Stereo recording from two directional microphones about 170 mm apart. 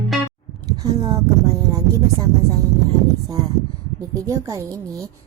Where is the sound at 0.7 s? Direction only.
20° right (ahead or behind).